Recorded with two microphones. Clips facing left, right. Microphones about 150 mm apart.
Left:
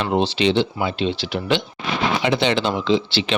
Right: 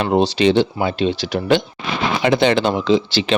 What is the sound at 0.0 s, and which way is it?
Speech, 40° right (ahead or behind).